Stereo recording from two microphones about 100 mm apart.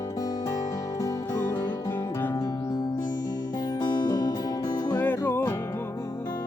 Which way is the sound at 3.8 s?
45° left (ahead or behind).